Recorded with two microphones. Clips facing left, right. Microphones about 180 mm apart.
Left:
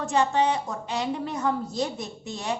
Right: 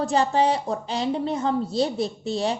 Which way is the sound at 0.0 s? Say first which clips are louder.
Right 2 dB; 35° right (ahead or behind).